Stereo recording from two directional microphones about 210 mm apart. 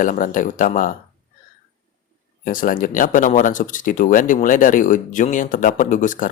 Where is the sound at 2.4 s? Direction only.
40° left (ahead or behind).